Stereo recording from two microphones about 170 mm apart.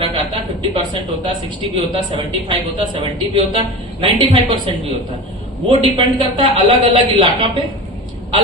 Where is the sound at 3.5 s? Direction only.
30° right (ahead or behind).